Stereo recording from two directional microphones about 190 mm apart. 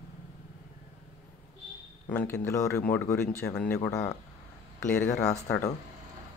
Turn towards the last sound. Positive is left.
turn(degrees=15)  # may be behind; listen again after turning